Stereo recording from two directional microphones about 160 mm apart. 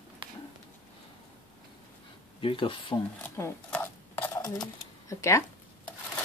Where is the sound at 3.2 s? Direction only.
15° left (ahead or behind).